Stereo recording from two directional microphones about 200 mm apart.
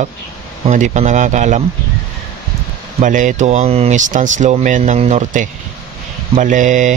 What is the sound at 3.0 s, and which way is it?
Speech, 40° right (ahead or behind).